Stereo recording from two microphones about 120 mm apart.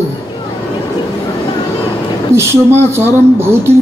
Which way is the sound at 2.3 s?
20° right (ahead or behind).